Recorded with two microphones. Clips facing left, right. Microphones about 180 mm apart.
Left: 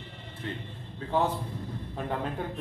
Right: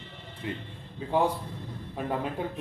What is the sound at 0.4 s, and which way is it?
Speech, 10° right (ahead or behind).